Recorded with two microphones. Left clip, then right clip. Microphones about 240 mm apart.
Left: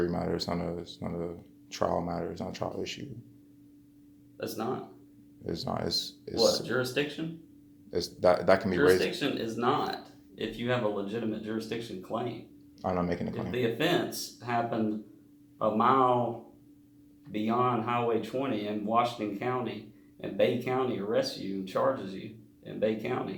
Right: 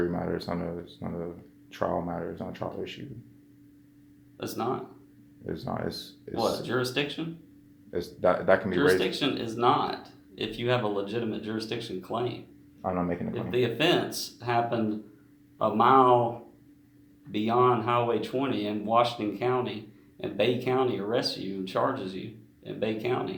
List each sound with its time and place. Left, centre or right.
0.0 s speech: left
4.4 s speech: right
5.5 s speech: left
6.7 s speech: right
7.9 s speech: left
9.1 s speech: right
12.8 s speech: left
13.3 s speech: right
17.3 s speech: right